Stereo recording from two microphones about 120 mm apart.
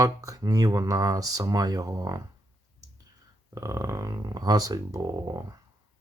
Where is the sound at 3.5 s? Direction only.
25° right (ahead or behind).